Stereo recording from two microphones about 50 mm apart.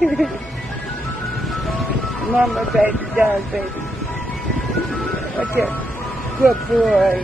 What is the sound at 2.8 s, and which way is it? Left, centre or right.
Speech, right.